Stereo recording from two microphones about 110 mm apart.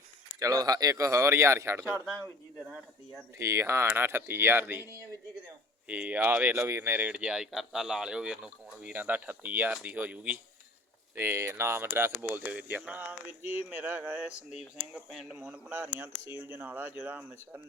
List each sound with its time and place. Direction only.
0.3 s speech: 30° right (ahead or behind)
3.3 s speech: 25° right (ahead or behind)